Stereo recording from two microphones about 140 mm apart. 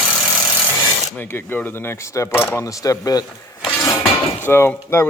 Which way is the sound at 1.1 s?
15° left (ahead or behind).